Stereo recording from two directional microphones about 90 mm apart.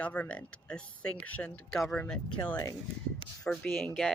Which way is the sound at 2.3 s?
60° left (ahead or behind).